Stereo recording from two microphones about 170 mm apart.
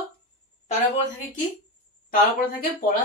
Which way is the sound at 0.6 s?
45° left (ahead or behind).